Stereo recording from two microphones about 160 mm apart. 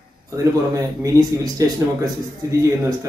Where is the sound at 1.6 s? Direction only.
20° right (ahead or behind).